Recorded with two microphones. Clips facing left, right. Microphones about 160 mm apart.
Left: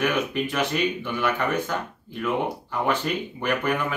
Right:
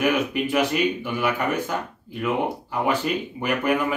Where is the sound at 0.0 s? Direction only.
10° right (ahead or behind).